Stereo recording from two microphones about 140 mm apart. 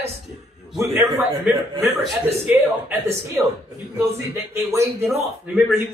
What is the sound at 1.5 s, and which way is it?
Speech, 10° right (ahead or behind).